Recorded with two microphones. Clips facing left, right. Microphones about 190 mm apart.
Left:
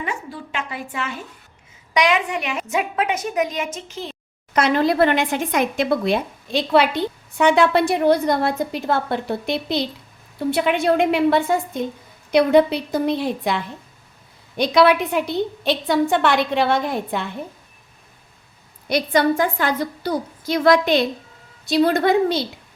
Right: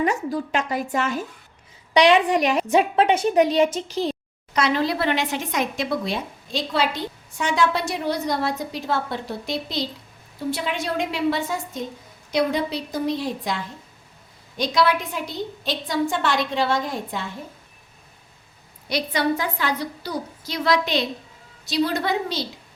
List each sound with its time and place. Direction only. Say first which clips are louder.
0.0 s a woman's voice: right 7 dB; 40° right (ahead or behind)
4.5 s a woman's voice: left 4 dB; 50° left (ahead or behind)
18.9 s a woman's voice: left 5 dB; 50° left (ahead or behind)